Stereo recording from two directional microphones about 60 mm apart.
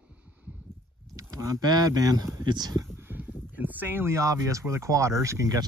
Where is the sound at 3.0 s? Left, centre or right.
Right.